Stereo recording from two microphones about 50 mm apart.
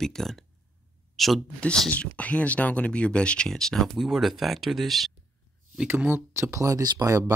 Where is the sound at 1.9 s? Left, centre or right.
Left.